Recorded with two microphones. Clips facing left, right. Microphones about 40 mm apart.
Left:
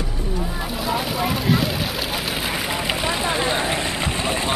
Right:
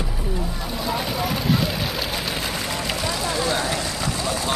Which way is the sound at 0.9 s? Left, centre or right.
Centre.